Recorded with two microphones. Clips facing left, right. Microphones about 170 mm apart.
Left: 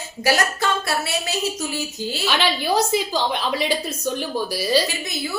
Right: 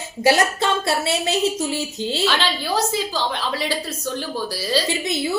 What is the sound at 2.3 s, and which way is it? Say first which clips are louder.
A woman's voice: left 2 dB; 15° left (ahead or behind).